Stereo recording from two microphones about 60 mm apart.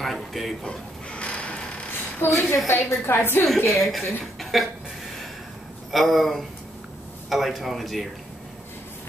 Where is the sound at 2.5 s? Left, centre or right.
Left.